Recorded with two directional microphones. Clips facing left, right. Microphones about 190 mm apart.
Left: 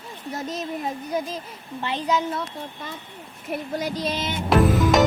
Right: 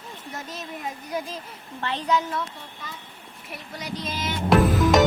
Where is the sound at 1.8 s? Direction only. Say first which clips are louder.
Left 1 dB; 15° left (ahead or behind).